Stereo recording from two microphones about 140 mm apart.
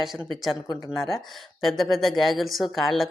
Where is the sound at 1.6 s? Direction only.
Centre (ahead or behind).